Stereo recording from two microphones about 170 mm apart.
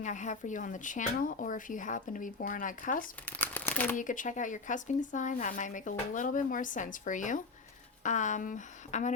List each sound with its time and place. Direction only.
0.0 s speech: 45° left (ahead or behind)
3.2 s crumpling: 10° left (ahead or behind)
3.9 s speech: 50° left (ahead or behind)